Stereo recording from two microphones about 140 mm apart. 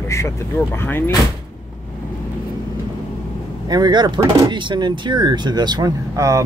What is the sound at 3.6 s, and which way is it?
Speech, 30° right (ahead or behind).